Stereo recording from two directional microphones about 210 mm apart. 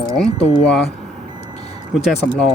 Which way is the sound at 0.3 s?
30° left (ahead or behind).